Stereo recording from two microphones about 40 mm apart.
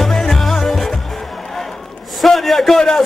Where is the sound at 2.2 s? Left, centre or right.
Centre.